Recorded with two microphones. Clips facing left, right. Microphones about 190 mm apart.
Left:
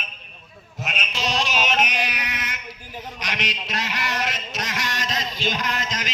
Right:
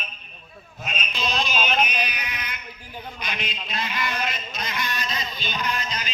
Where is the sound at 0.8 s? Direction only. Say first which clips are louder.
Left 2 dB; 80° left.